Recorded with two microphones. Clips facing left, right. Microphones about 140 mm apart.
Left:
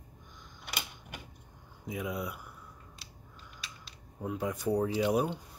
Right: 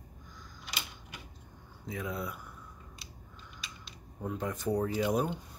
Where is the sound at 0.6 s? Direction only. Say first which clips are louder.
Left 2 dB; 55° left (ahead or behind).